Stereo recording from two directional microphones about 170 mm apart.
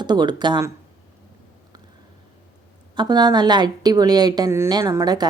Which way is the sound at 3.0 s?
25° right (ahead or behind).